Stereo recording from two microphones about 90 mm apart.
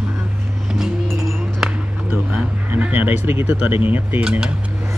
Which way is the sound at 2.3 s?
20° right (ahead or behind).